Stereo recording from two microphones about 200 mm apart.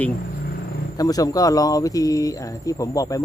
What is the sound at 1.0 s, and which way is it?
Speech, 20° left (ahead or behind).